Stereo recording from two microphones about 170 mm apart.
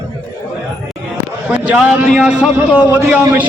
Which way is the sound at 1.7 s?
5° right (ahead or behind).